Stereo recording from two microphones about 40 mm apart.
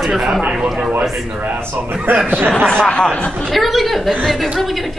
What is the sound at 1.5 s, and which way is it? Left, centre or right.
Speech, right.